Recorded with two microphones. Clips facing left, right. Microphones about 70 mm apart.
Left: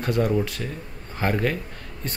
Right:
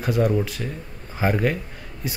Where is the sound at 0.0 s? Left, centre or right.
Centre.